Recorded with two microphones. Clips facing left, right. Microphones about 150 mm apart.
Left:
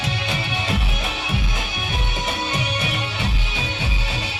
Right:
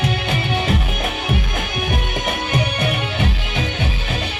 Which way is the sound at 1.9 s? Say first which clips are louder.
Right 3 dB; 55° right (ahead or behind).